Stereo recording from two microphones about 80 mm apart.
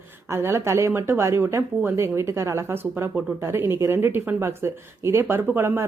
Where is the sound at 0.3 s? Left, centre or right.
Right.